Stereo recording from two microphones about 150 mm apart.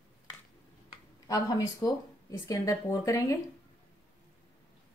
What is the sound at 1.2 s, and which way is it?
Speech, 25° left (ahead or behind).